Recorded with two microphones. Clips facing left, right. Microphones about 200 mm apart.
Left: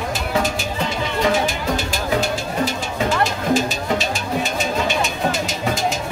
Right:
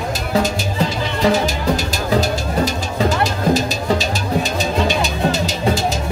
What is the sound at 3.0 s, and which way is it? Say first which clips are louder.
Music: right 2 dB; 35° right (ahead or behind).